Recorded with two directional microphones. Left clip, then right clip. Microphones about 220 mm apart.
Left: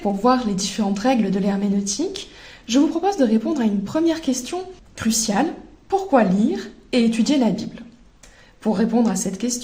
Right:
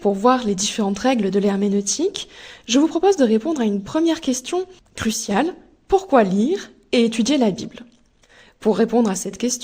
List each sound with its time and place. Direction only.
0.0 s a woman's voice: 45° right (ahead or behind)